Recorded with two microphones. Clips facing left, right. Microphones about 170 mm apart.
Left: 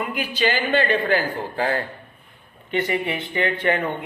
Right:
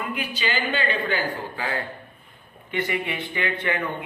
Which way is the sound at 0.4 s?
50° left (ahead or behind).